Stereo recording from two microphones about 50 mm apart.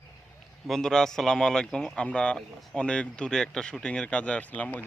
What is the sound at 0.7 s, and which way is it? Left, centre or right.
A man's voice, centre.